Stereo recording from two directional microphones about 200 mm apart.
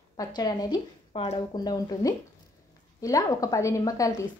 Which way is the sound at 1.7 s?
20° left (ahead or behind).